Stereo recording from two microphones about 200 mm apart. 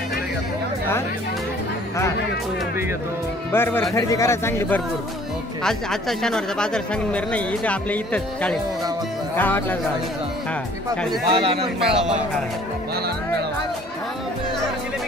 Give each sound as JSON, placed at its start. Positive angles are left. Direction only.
{"t": 3.5, "sound": "speech", "side_deg": 10}
{"t": 11.2, "sound": "a man's voice", "side_deg": -25}
{"t": 11.9, "sound": "speech", "side_deg": -5}